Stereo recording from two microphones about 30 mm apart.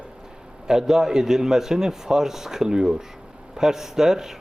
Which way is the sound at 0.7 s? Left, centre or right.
Centre.